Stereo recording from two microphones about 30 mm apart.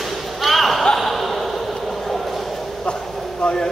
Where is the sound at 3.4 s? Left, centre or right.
Left.